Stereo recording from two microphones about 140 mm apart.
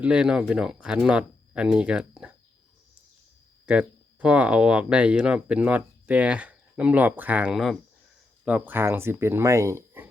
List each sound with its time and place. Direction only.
0.0 s speech: 10° right (ahead or behind)
3.7 s speech: 10° right (ahead or behind)